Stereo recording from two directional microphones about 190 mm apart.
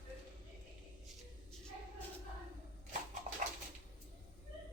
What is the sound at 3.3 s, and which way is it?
Dog, 40° right (ahead or behind).